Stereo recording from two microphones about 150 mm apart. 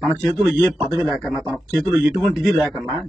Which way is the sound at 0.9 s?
25° right (ahead or behind).